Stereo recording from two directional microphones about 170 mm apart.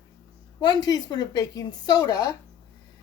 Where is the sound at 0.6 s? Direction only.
25° left (ahead or behind).